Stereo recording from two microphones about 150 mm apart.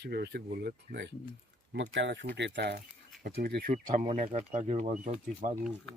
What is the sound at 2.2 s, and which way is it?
Speech, 90° right.